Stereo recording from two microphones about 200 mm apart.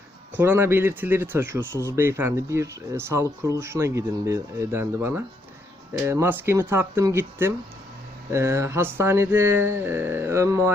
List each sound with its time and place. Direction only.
0.3 s speech: 10° right (ahead or behind)